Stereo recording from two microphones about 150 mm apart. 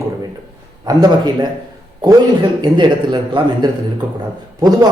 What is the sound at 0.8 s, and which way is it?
Speech, 25° right (ahead or behind).